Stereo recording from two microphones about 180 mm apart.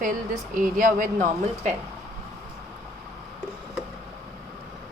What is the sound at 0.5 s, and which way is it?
Speech, 50° right (ahead or behind).